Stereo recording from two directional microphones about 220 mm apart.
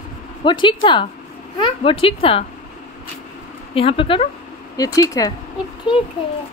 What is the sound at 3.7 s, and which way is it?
Speech, 25° left (ahead or behind).